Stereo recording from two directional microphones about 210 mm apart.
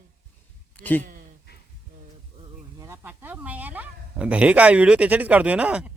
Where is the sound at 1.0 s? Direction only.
40° right (ahead or behind).